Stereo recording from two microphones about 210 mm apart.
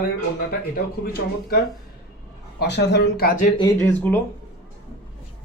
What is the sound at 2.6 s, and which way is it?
Speech, 55° left (ahead or behind).